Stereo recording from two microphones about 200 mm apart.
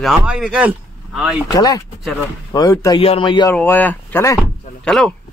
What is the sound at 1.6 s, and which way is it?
Speech, 15° left (ahead or behind).